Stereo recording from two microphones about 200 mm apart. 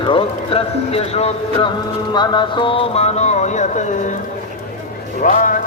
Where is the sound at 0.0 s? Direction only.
25° left (ahead or behind).